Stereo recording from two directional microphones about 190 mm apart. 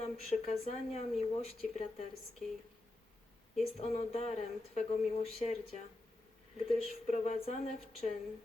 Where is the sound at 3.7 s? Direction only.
35° left (ahead or behind).